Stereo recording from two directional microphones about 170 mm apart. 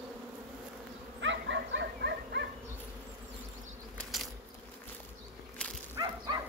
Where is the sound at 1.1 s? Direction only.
90° right; by 2.4 s 75° right (ahead or behind).